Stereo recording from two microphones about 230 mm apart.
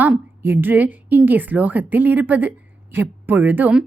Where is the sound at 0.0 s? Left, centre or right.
Centre.